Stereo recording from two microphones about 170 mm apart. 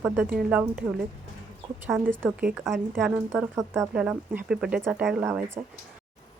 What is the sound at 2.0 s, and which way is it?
Speech, 10° right (ahead or behind).